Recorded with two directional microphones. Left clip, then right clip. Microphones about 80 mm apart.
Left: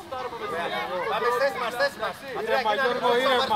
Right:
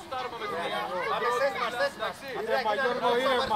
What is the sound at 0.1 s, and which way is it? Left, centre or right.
Chatter, right.